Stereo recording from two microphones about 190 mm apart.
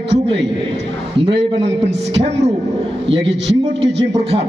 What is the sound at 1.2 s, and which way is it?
A man's voice, 30° right (ahead or behind).